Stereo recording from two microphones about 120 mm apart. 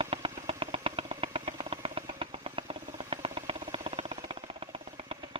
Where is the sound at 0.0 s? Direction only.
50° right (ahead or behind).